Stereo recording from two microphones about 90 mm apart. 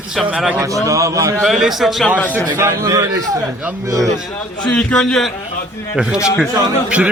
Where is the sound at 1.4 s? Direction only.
5° right (ahead or behind).